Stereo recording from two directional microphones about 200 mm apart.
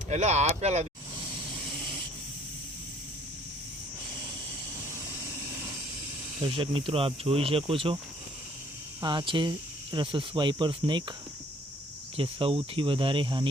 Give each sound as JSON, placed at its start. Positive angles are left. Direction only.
{"t": 0.1, "sound": "speech", "side_deg": -35}
{"t": 6.4, "sound": "speech", "side_deg": -25}
{"t": 9.0, "sound": "speech", "side_deg": -20}
{"t": 12.1, "sound": "speech", "side_deg": -25}